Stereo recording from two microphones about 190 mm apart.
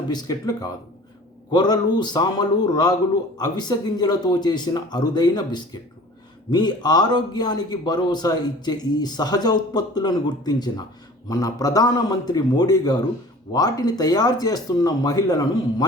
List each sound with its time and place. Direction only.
0.1 s a man's voice: 20° left (ahead or behind)